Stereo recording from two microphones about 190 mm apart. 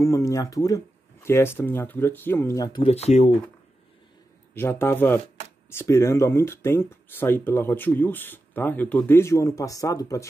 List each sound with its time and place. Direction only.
0.0 s speech: 15° left (ahead or behind)
2.8 s speech: 35° left (ahead or behind)
4.6 s speech: 15° left (ahead or behind)